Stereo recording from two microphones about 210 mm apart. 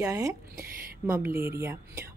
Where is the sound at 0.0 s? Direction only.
15° right (ahead or behind).